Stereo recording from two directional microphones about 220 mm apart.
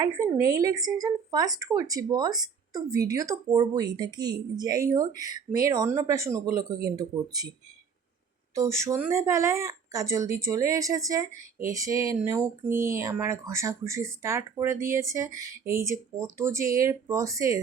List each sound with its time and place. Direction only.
0.0 s speech: 15° right (ahead or behind)
8.5 s speech: 15° right (ahead or behind)